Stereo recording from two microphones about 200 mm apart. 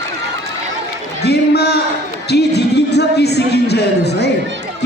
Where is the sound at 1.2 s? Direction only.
55° left (ahead or behind).